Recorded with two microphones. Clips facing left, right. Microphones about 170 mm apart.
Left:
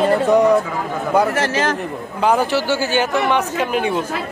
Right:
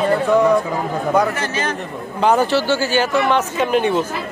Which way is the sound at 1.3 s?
90° left.